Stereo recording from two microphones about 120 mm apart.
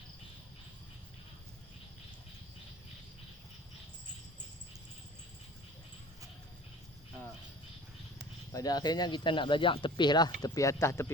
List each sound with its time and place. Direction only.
8.5 s speech: 35° left (ahead or behind)